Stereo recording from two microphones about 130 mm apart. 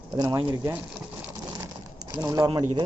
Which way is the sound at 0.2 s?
35° right (ahead or behind).